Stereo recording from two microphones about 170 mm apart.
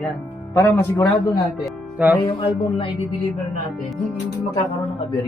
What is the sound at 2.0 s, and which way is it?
Music, 10° right (ahead or behind).